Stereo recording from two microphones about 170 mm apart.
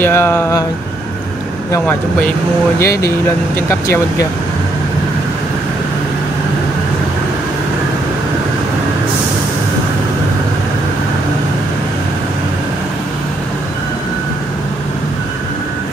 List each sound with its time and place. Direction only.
0.0 s speech: 15° left (ahead or behind)
2.8 s speech: 20° left (ahead or behind)